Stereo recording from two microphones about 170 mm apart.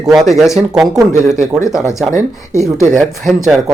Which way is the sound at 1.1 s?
45° right (ahead or behind).